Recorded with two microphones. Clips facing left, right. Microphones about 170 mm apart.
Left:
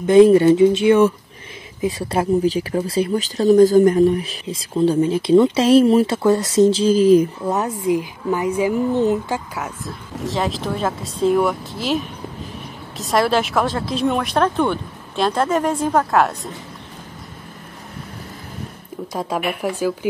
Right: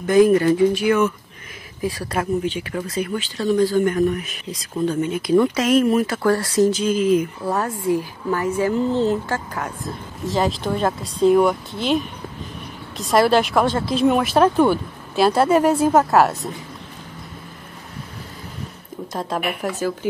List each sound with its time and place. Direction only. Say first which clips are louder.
0.0 s speech: left 4 dB; 25° left (ahead or behind)
7.4 s speech: left 2 dB; 20° left (ahead or behind)
9.6 s speech: right 1 dB; centre (ahead or behind)
19.1 s speech: left 2 dB; 10° left (ahead or behind)